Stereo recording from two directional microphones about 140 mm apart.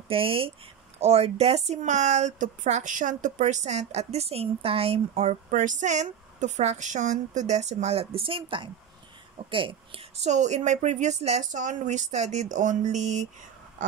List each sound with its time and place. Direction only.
0.1 s a woman's voice: 40° right (ahead or behind)
10.2 s speech: 55° right (ahead or behind)